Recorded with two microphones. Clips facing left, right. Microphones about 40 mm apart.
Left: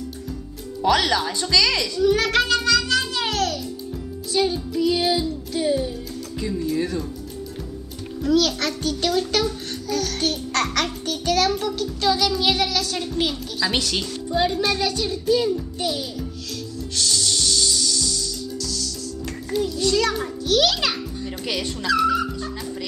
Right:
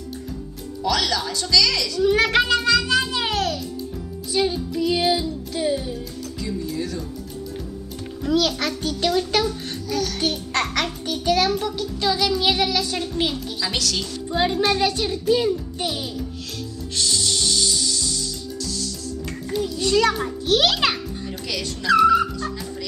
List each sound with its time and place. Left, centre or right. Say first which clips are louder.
0.8 s speech: left 3 dB; left
2.0 s music: right 1 dB; centre
8.2 s a child's voice: left 1 dB; centre
13.0 s music: even; centre
13.7 s speech: left 2 dB; centre
14.3 s a child's voice: right 1 dB; centre
14.8 s music: right 2 dB; right
19.5 s a child's voice: left 2 dB; centre
19.8 s music: right 4 dB; right
20.4 s a child's voice: even; right
21.9 s music: right 5 dB; centre